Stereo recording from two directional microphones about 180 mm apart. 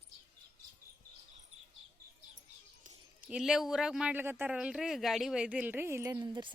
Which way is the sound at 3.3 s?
Centre (ahead or behind).